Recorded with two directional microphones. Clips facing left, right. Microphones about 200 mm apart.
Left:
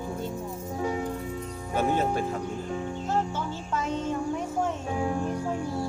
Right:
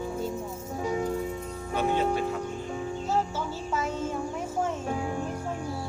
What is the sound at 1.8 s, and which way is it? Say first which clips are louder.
Speech: even; 45° left (ahead or behind).